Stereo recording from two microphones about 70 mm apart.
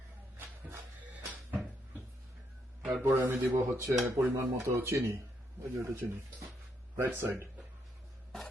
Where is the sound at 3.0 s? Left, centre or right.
Right.